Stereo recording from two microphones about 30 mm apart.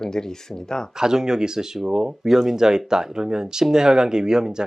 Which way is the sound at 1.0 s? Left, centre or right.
Right.